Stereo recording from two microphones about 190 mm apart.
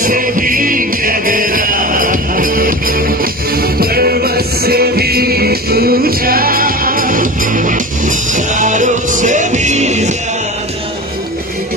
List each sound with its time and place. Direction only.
0.0 s music: 45° right (ahead or behind)